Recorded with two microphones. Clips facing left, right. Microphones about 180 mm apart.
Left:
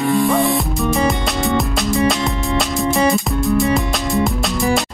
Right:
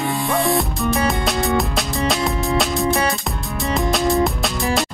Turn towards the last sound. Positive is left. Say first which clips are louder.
# left 3 dB
turn(degrees=0)  # may be behind; listen again after turning